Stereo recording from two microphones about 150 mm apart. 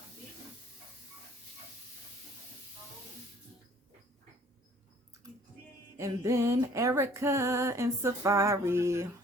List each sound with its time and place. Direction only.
6.0 s music: 20° right (ahead or behind)